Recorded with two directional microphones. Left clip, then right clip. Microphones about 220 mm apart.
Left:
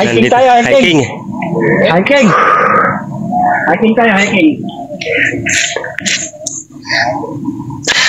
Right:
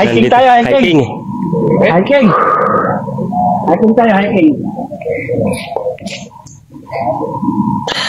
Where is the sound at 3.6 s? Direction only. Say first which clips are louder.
Even; centre (ahead or behind).